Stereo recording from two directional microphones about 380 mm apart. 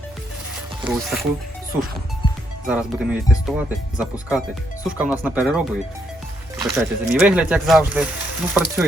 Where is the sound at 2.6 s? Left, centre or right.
Centre.